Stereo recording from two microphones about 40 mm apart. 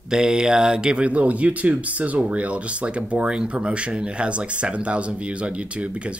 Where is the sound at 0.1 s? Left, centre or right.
Centre.